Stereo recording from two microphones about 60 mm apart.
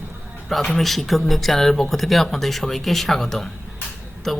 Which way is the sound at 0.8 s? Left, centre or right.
Centre.